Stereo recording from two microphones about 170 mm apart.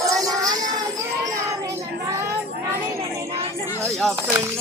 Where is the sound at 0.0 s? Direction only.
20° right (ahead or behind).